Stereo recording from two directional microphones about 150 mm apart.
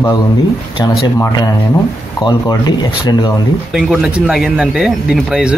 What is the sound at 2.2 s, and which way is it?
Speech, 30° left (ahead or behind).